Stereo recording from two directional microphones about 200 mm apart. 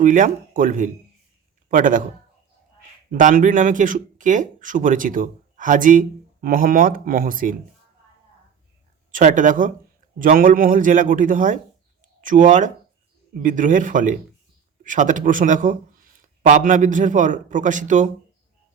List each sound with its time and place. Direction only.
0.0 s speech: 40° right (ahead or behind)
3.1 s speech: 40° right (ahead or behind)
9.1 s speech: 40° right (ahead or behind)